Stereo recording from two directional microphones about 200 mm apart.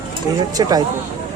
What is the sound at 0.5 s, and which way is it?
Speech, 20° right (ahead or behind).